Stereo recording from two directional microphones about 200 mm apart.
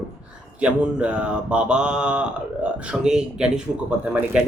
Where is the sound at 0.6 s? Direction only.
5° right (ahead or behind).